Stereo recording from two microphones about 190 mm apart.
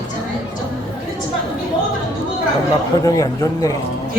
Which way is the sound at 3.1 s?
20° left (ahead or behind).